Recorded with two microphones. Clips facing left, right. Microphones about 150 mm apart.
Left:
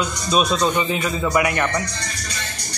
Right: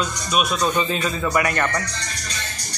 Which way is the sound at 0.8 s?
15° left (ahead or behind).